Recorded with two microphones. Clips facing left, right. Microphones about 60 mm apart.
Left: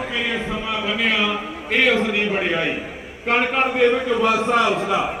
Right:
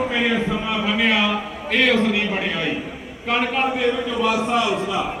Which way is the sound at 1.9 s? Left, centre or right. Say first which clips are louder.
Even; left.